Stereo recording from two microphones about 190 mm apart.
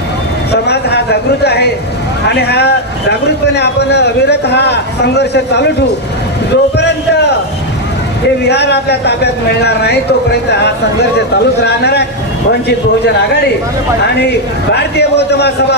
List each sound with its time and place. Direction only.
0.5 s a man's voice: 60° left (ahead or behind)
8.5 s a man's voice: 60° left (ahead or behind)
11.6 s a man's voice: 60° left (ahead or behind)